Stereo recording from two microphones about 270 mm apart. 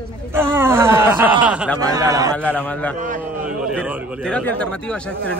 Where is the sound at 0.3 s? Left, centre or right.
Centre.